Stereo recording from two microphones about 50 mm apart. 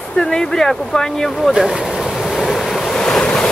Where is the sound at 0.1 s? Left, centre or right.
Centre.